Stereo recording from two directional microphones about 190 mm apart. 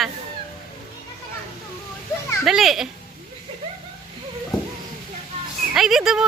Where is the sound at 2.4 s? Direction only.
Centre (ahead or behind).